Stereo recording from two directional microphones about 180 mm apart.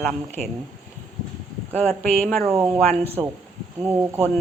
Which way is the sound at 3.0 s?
35° right (ahead or behind).